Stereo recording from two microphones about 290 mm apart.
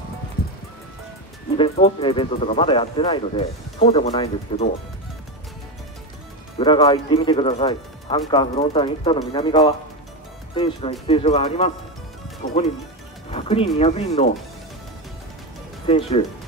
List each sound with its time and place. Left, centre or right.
1.6 s speech: centre
6.6 s speech: centre
13.3 s music: left
13.7 s speech: left
15.9 s speech: left